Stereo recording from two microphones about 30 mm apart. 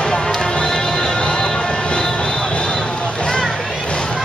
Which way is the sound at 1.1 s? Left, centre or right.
Left.